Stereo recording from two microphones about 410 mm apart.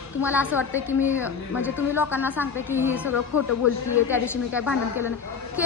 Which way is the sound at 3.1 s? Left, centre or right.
Left.